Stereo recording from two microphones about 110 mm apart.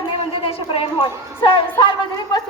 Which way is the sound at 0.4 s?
55° left (ahead or behind).